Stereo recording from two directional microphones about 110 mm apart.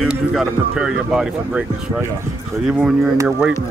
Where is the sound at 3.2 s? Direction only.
15° right (ahead or behind).